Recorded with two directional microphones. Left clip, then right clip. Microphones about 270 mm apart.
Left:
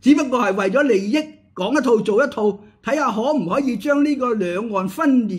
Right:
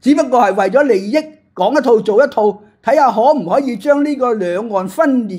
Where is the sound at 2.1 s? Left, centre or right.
Centre.